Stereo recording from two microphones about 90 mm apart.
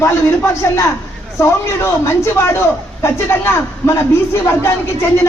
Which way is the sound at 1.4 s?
30° left (ahead or behind).